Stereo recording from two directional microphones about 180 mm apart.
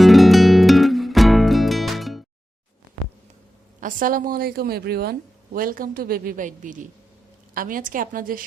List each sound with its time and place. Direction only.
0.0 s music: centre (ahead or behind)
3.8 s a woman's voice: 50° right (ahead or behind)